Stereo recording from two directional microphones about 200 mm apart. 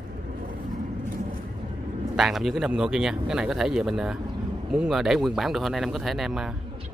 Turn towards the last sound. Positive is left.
turn(degrees=0)  # may be behind; listen again after turning